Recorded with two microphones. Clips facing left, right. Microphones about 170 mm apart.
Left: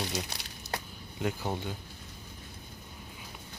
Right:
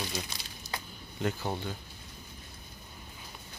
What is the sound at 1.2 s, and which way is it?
Speech, 10° left (ahead or behind).